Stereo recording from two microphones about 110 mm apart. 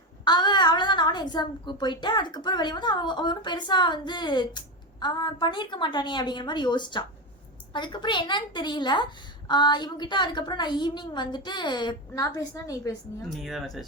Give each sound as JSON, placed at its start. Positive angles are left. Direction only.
{"t": 0.3, "sound": "a woman's voice", "side_deg": 45}
{"t": 13.3, "sound": "speech", "side_deg": 0}